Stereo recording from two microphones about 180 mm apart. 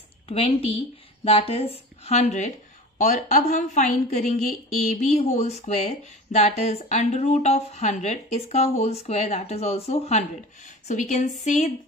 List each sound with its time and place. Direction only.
0.3 s a woman's voice: 35° left (ahead or behind)